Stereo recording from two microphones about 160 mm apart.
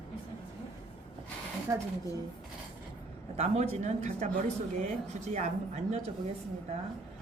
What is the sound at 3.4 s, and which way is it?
Speech, 45° right (ahead or behind).